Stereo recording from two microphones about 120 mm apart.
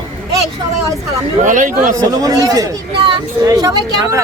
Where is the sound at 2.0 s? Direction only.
30° right (ahead or behind).